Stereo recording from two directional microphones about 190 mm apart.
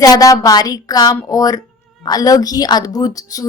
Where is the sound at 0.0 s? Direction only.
20° left (ahead or behind).